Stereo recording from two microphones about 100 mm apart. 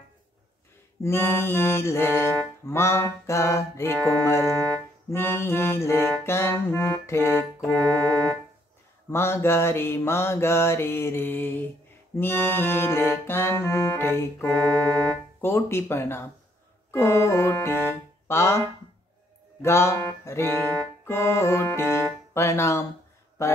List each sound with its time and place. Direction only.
1.0 s music: 25° left (ahead or behind)
9.1 s music: 25° left (ahead or behind)